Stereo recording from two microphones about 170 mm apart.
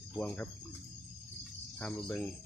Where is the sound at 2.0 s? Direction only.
10° left (ahead or behind).